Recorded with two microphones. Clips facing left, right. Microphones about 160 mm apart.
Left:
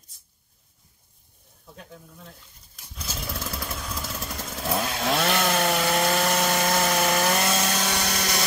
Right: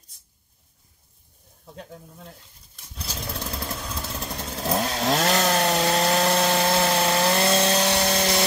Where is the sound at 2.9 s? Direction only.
35° right (ahead or behind).